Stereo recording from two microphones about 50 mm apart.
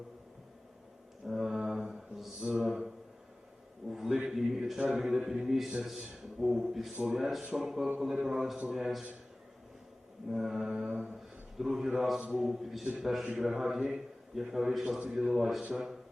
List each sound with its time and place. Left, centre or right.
1.2 s music: centre
1.6 s mantra: centre
2.6 s a sound: centre
4.9 s a man's voice: centre
6.9 s a man's voice: centre
7.2 s a man's voice: centre
10.2 s a man's voice: centre
14.8 s a man's voice: centre